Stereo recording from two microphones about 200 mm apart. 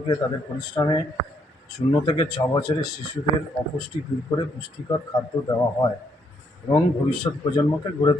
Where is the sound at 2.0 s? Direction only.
25° left (ahead or behind).